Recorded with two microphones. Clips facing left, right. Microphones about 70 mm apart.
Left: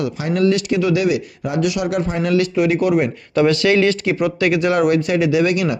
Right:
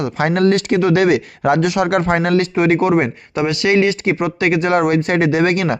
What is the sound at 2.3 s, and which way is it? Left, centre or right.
Speech, right.